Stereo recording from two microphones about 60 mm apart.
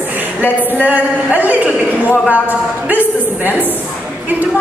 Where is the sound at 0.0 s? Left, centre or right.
Right.